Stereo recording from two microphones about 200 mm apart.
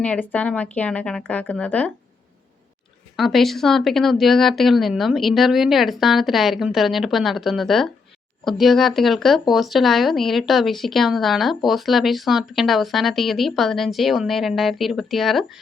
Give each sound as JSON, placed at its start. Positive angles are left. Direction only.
{"t": 0.0, "sound": "speech", "side_deg": 5}
{"t": 3.2, "sound": "speech", "side_deg": 0}